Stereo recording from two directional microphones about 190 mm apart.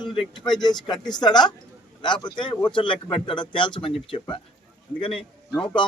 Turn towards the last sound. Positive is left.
turn(degrees=25)  # may be behind; listen again after turning